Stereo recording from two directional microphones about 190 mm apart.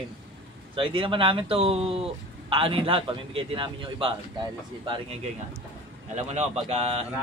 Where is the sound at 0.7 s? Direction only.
25° right (ahead or behind).